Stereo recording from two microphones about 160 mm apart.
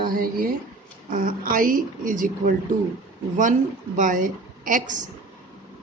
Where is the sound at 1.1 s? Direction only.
60° right (ahead or behind).